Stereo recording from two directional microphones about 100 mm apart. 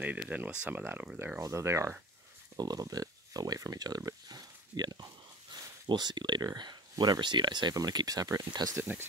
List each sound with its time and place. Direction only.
0.3 s speech: 15° right (ahead or behind)
1.4 s speech: 30° right (ahead or behind)
2.5 s speech: 40° right (ahead or behind)